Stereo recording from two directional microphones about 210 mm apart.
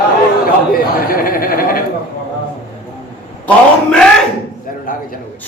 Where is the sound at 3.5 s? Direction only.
5° left (ahead or behind).